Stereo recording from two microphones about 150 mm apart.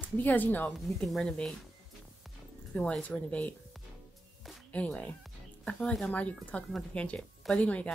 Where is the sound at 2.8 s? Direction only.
10° left (ahead or behind).